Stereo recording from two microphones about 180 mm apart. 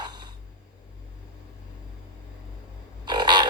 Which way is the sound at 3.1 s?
25° right (ahead or behind).